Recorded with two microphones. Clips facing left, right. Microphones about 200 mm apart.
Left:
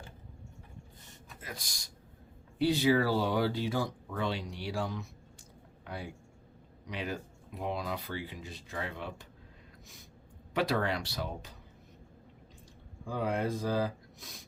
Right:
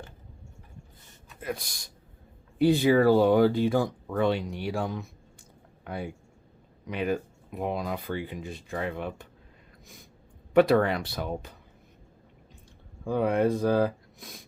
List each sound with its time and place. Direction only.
1.4 s speech: 60° right (ahead or behind)
10.5 s speech: 55° right (ahead or behind)
13.1 s speech: 60° right (ahead or behind)